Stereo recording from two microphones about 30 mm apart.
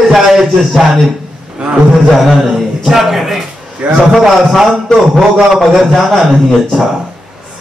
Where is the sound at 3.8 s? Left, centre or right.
Right.